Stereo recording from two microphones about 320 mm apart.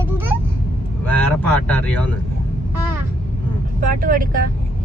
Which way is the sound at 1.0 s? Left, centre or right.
Centre.